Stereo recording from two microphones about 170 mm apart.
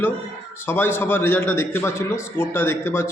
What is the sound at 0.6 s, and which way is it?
A man's voice, 15° left (ahead or behind).